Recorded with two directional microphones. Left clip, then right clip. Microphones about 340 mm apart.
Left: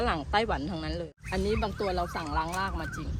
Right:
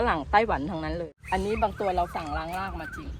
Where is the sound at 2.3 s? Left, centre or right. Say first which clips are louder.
Left 1 dB; centre.